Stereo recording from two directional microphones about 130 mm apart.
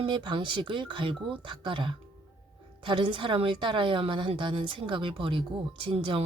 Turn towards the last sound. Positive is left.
turn(degrees=-45)  # may be behind; listen again after turning